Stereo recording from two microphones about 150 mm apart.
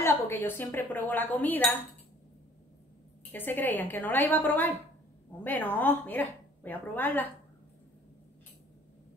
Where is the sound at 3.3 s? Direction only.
15° left (ahead or behind).